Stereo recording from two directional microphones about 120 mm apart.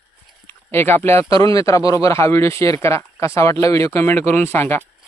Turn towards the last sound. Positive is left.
turn(degrees=20)  # may be behind; listen again after turning